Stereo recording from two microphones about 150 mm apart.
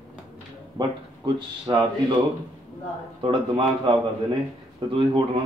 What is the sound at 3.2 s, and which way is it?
Speech, 35° right (ahead or behind).